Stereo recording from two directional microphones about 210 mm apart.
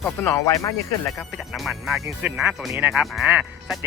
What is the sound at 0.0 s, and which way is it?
Speech, 10° left (ahead or behind).